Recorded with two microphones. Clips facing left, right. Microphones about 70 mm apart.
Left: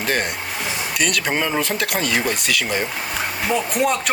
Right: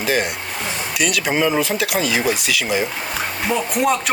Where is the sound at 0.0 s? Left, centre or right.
Centre.